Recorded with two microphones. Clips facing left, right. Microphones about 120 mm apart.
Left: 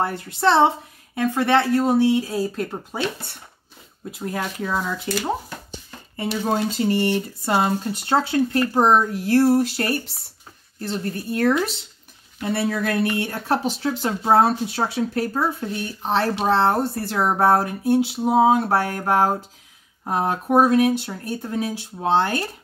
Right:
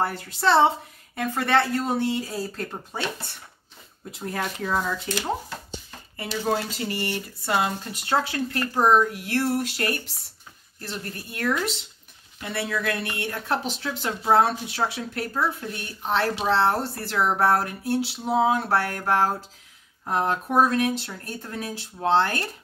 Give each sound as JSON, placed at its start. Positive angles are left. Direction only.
{"t": 1.3, "sound": "speech", "side_deg": 15}
{"t": 4.2, "sound": "speech", "side_deg": 5}
{"t": 6.1, "sound": "speech", "side_deg": 25}
{"t": 7.4, "sound": "speech", "side_deg": 35}